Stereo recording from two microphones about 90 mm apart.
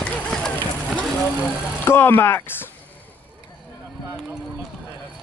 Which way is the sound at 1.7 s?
25° left (ahead or behind).